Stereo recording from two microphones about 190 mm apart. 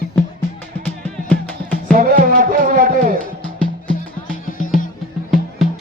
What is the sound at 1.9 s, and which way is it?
Music, 45° right (ahead or behind).